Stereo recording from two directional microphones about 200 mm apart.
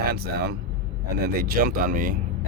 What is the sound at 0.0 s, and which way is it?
Speech, 50° right (ahead or behind).